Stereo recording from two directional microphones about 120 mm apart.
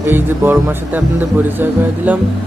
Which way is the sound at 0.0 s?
20° right (ahead or behind).